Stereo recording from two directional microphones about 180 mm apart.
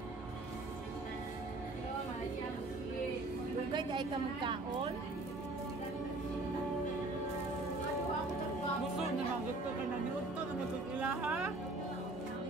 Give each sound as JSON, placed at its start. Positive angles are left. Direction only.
{"t": 3.7, "sound": "a woman's voice", "side_deg": -25}
{"t": 11.0, "sound": "speech", "side_deg": -5}